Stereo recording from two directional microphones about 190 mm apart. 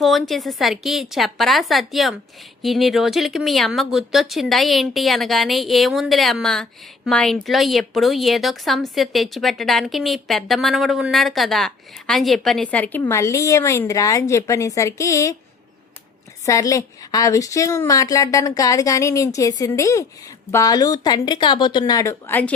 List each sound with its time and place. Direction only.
0.0 s speech: centre (ahead or behind); by 15.4 s 15° left (ahead or behind)
16.5 s a woman's voice: 15° left (ahead or behind)